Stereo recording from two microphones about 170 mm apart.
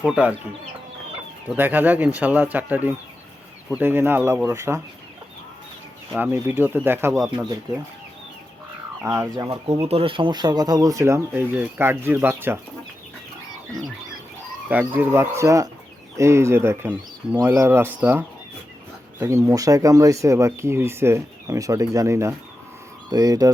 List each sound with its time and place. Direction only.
0.0 s speech: 5° right (ahead or behind)
1.5 s speech: 10° right (ahead or behind)
6.1 s speech: 10° right (ahead or behind)
9.0 s speech: 15° right (ahead or behind)
9.8 s speech: 35° right (ahead or behind); by 12.5 s 15° right (ahead or behind)
14.7 s speech: 10° right (ahead or behind)